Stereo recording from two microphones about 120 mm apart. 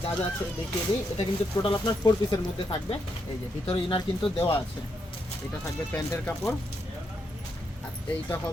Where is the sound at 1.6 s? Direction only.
40° left (ahead or behind).